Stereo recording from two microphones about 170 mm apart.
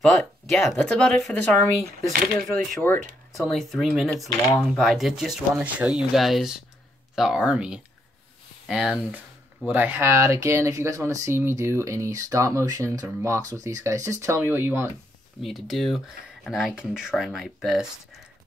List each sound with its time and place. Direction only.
0.0 s speech: centre (ahead or behind); by 14.9 s 15° right (ahead or behind)
15.4 s speech: centre (ahead or behind)